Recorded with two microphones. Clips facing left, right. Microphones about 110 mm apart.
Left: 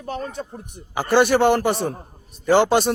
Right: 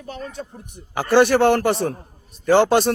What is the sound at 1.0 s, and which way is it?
Speech, centre (ahead or behind).